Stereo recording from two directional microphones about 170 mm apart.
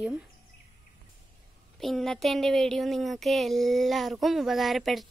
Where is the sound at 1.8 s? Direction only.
Centre (ahead or behind).